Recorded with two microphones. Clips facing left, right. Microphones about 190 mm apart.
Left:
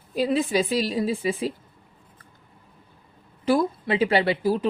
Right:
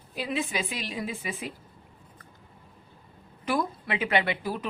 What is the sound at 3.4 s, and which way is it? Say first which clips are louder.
Speech: left 7 dB; 30° left (ahead or behind).